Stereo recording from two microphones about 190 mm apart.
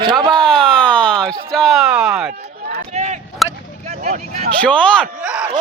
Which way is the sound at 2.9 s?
35° right (ahead or behind).